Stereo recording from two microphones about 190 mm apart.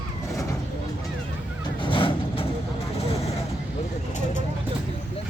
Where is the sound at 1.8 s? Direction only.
25° left (ahead or behind).